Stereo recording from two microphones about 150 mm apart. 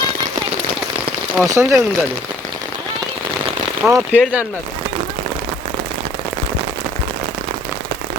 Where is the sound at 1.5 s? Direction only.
20° right (ahead or behind).